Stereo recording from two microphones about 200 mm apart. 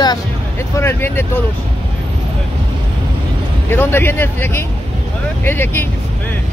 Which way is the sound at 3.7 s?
10° left (ahead or behind).